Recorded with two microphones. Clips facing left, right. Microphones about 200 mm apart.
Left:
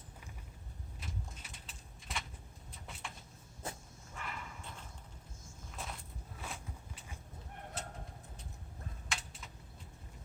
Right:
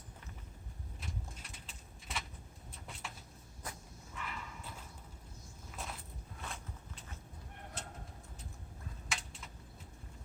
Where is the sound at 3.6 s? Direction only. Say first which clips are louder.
Left 3 dB; 25° left (ahead or behind).